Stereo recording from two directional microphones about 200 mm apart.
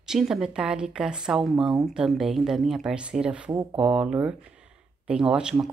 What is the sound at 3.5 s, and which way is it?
Speech, 15° right (ahead or behind).